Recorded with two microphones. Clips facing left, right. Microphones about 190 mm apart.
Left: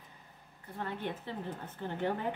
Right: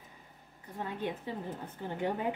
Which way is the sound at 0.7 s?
15° right (ahead or behind).